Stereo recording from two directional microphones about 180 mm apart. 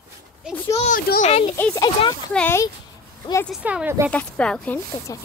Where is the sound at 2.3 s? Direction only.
10° left (ahead or behind).